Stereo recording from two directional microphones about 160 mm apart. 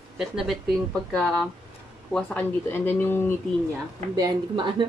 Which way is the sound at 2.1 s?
10° left (ahead or behind).